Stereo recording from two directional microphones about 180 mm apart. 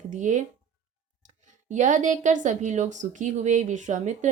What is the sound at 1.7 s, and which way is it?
Speech, 45° right (ahead or behind).